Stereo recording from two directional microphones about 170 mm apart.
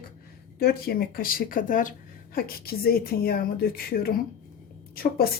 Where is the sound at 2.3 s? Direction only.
60° left (ahead or behind).